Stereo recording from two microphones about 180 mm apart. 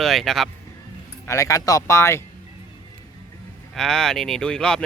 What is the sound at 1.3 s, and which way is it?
Speech, 15° left (ahead or behind).